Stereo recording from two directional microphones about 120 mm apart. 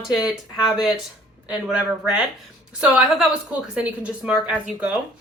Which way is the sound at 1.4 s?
5° right (ahead or behind).